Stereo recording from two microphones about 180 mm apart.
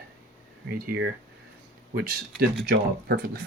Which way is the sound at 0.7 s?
55° right (ahead or behind).